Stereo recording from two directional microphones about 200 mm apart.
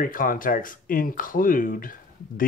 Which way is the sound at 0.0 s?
45° left (ahead or behind).